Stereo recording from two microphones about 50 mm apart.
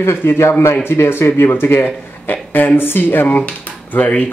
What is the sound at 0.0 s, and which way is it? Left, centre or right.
Speech, left.